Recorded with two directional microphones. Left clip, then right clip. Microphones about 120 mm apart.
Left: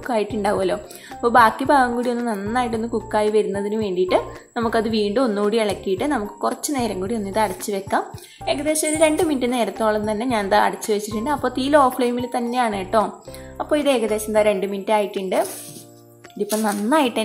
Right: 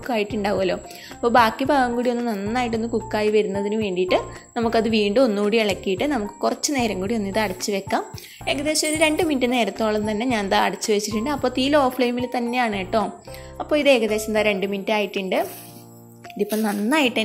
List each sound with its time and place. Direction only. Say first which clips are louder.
0.0 s a woman's voice: left 2 dB; 30° right (ahead or behind)
16.6 s a woman's voice: left 3 dB; 30° right (ahead or behind)